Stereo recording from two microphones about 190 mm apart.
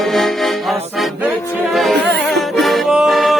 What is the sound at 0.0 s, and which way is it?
Music, centre (ahead or behind).